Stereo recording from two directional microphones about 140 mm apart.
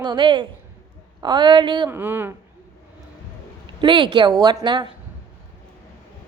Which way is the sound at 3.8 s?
35° right (ahead or behind).